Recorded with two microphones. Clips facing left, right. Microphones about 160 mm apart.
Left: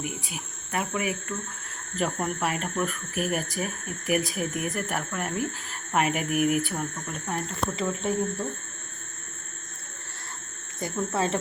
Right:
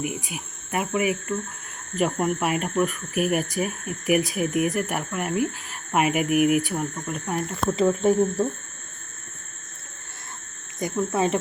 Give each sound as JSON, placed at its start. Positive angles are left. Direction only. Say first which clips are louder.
{"t": 0.3, "sound": "speech", "louder": "right 3 dB", "side_deg": -10}
{"t": 7.8, "sound": "speech", "louder": "right 10 dB", "side_deg": -30}
{"t": 10.8, "sound": "speech", "louder": "right 4 dB", "side_deg": -15}